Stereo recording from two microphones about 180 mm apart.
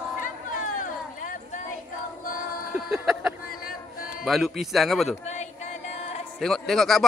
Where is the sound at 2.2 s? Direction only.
50° left (ahead or behind).